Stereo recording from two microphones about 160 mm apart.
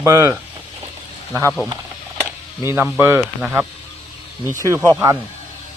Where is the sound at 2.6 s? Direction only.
15° right (ahead or behind).